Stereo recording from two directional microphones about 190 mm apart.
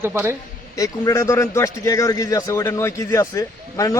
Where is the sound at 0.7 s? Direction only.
15° left (ahead or behind).